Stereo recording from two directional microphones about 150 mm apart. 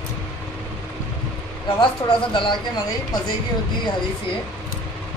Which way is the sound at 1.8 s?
35° left (ahead or behind).